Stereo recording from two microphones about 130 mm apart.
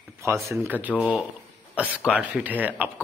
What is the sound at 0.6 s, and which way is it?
Speech, 15° right (ahead or behind).